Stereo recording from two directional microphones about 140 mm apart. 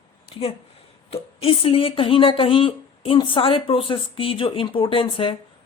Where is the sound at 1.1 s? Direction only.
45° left (ahead or behind).